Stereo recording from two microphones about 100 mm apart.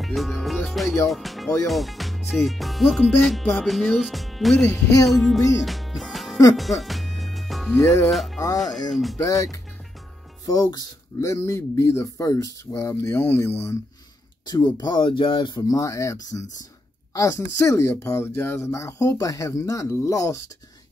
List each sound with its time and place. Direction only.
0.0 s speech: centre (ahead or behind)
6.5 s music: centre (ahead or behind)
8.1 s speech: centre (ahead or behind)
10.4 s speech: 40° left (ahead or behind)
11.1 s speech: 30° left (ahead or behind)
14.4 s speech: 40° left (ahead or behind)
15.8 s speech: 30° left (ahead or behind)